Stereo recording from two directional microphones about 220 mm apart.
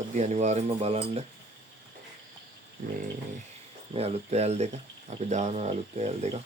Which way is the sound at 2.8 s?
35° right (ahead or behind).